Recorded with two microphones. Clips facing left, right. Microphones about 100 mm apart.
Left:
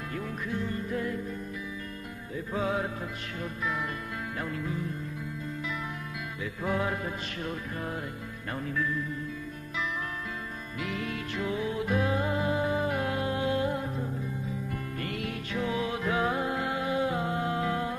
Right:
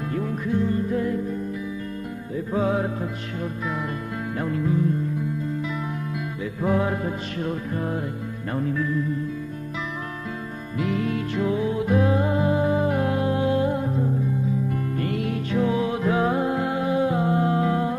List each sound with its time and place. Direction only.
0.1 s music: 30° right (ahead or behind)
2.5 s music: 35° right (ahead or behind)
6.6 s music: 35° right (ahead or behind)
10.8 s music: 35° right (ahead or behind)